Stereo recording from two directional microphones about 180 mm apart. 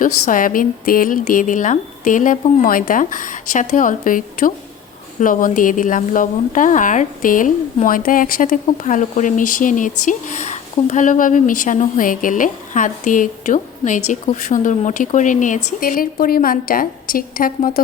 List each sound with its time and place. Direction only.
0.0 s a woman's voice: 50° left (ahead or behind)